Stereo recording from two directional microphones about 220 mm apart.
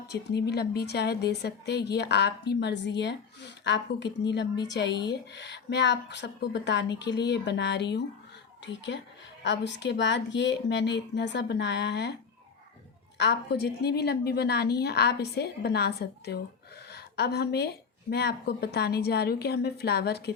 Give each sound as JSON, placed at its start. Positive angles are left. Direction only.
{"t": 0.1, "sound": "a woman's voice", "side_deg": 50}
{"t": 13.1, "sound": "a woman's voice", "side_deg": 50}